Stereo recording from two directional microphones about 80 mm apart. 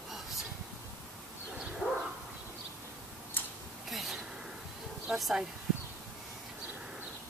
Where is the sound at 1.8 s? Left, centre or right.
Centre.